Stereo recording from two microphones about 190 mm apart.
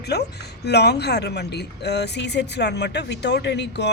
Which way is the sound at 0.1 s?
60° left (ahead or behind).